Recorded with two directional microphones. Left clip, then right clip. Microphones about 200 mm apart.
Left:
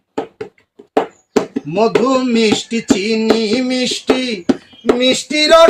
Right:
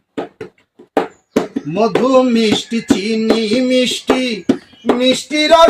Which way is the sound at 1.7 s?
Centre (ahead or behind).